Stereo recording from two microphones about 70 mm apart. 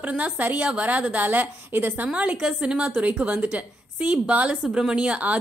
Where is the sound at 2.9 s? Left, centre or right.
Right.